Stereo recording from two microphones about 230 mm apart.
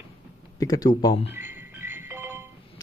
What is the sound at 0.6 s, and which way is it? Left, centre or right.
Speech, centre.